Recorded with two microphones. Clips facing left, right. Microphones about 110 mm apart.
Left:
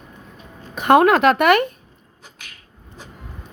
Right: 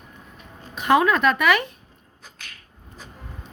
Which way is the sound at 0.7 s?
55° left (ahead or behind).